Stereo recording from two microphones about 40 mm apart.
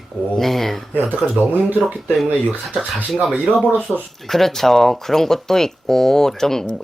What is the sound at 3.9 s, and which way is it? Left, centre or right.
Speech, centre.